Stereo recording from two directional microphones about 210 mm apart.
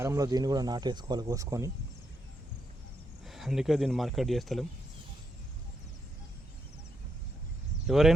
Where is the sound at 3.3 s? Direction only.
Centre (ahead or behind).